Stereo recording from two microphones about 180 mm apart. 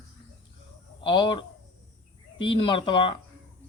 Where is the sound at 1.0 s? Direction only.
25° left (ahead or behind).